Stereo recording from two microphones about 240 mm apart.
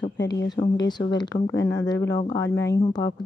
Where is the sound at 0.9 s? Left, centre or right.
Centre.